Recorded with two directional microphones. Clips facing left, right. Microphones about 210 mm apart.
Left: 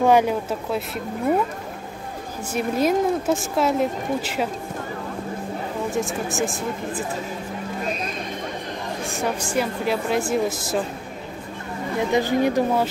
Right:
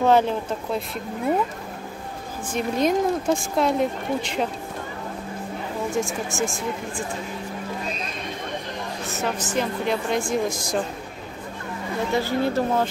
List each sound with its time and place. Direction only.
0.0 s speech: 10° left (ahead or behind)
2.5 s speech: 5° left (ahead or behind)
5.9 s speech: centre (ahead or behind)
9.0 s speech: 15° left (ahead or behind)
12.1 s speech: 15° left (ahead or behind)